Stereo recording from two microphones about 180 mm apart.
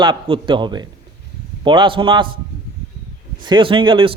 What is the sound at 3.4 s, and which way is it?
Speech, 25° right (ahead or behind).